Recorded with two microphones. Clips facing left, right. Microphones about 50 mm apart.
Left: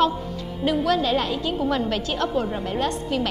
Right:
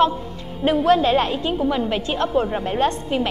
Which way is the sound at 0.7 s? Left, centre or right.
Right.